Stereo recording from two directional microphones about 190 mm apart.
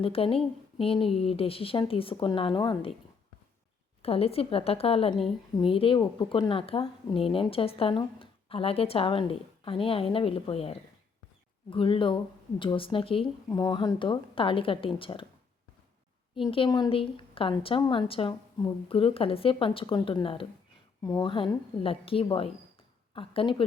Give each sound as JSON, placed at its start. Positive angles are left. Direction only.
{"t": 0.0, "sound": "speech", "side_deg": 30}
{"t": 4.0, "sound": "a woman's voice", "side_deg": 30}
{"t": 16.5, "sound": "speech", "side_deg": 25}